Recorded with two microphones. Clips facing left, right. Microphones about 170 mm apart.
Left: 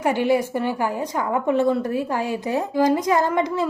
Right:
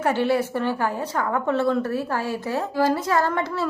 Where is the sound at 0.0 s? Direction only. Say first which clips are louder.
Left 2 dB; 15° left (ahead or behind).